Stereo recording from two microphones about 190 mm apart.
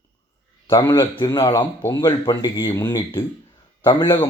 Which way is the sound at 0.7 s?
15° left (ahead or behind).